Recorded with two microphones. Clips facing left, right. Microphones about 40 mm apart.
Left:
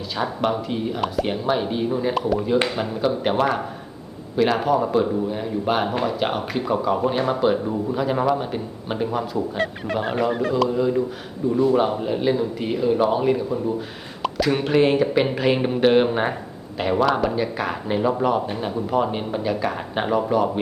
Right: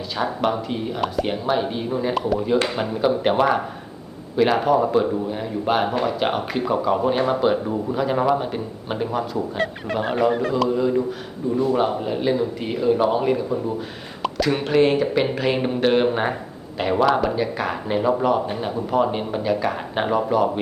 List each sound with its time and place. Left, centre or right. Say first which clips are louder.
0.2 s speech: right 1 dB; centre